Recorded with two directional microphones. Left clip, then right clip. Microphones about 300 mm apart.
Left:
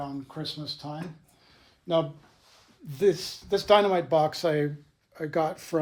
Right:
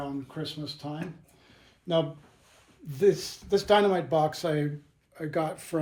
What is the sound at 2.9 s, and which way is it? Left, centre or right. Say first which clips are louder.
Speech: even; left.